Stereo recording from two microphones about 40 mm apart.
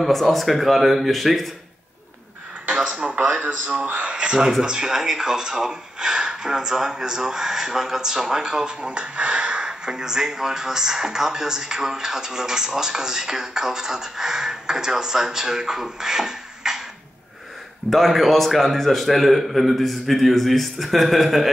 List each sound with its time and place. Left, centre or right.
0.0 s a man's voice: centre
3.3 s a man's voice: right
4.1 s speech: right
9.7 s speech: centre
17.8 s a man's voice: centre